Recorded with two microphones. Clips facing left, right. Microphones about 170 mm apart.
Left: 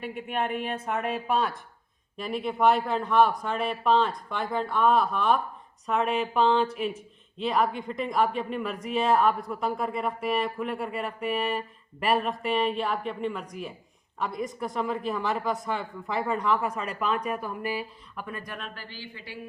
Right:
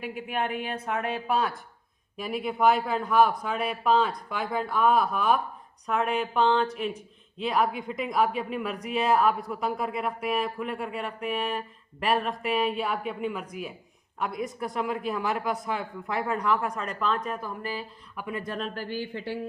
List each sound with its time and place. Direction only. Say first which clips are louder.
0.0 s speech: even; centre (ahead or behind)
18.2 s speech: right 4 dB; 20° right (ahead or behind)
18.5 s speech: right 8 dB; 40° right (ahead or behind)